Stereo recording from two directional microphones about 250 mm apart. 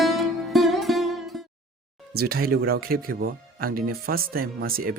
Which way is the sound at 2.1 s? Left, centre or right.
Right.